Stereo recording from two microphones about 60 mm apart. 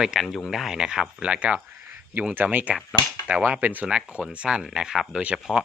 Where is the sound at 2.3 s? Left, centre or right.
Right.